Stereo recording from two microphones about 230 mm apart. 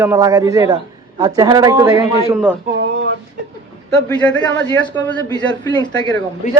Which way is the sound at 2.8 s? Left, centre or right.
Right.